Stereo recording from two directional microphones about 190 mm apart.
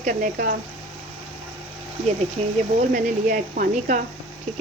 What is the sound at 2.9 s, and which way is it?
Speech, 45° right (ahead or behind).